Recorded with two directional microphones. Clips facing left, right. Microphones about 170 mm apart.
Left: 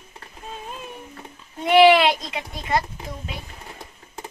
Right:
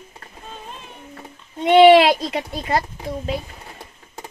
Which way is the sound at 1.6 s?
30° right (ahead or behind).